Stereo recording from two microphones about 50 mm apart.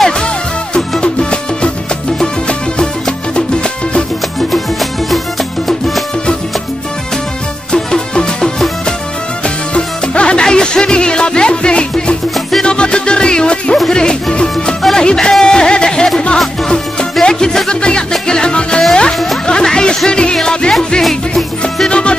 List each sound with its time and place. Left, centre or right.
0.7 s music: centre
4.5 s music: centre
7.7 s music: centre
12.4 s music: centre
12.6 s music: centre
21.0 s music: centre
21.8 s music: centre